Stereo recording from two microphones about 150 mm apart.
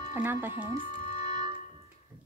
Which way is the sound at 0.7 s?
60° left (ahead or behind).